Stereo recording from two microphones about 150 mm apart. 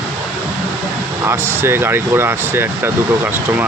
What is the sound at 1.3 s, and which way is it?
Speech, 15° right (ahead or behind).